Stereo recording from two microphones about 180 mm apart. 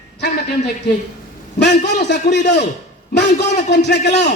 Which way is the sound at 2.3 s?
70° left (ahead or behind).